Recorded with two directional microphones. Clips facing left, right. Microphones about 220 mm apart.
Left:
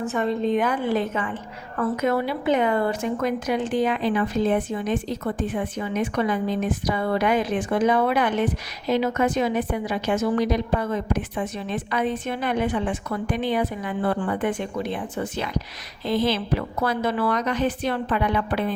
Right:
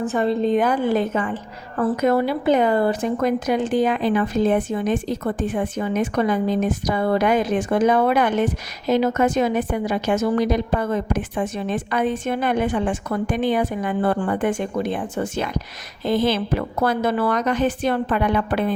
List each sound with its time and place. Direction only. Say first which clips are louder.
0.0 s a woman's voice: right 3 dB; 35° right (ahead or behind)